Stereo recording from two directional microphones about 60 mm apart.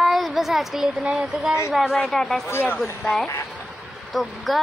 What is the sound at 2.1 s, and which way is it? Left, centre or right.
Speech, centre.